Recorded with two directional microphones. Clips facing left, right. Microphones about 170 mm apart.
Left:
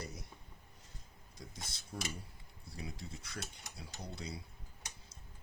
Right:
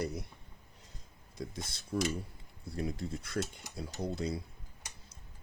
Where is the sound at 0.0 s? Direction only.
60° right (ahead or behind).